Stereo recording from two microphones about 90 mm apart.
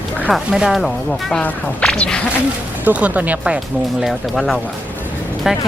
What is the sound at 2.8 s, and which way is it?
Speech, 15° right (ahead or behind).